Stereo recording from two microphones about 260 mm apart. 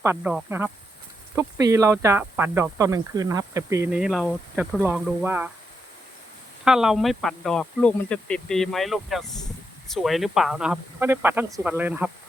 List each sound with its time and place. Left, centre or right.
0.0 s insect: centre
6.7 s speech: centre
9.9 s insect: centre